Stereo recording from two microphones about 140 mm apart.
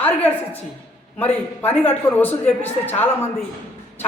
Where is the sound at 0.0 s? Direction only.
10° left (ahead or behind).